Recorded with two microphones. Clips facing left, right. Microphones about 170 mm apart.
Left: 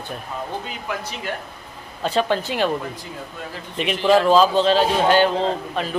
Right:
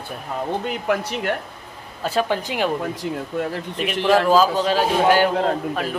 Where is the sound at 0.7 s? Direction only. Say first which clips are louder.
Right 7 dB; 60° right (ahead or behind).